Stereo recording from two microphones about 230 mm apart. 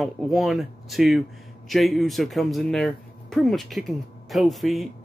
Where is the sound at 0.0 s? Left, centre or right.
Centre.